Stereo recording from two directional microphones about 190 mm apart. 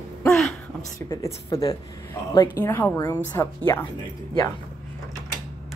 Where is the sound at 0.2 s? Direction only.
Centre (ahead or behind).